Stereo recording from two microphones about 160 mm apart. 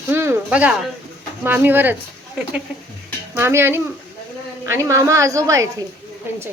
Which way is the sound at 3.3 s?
15° right (ahead or behind).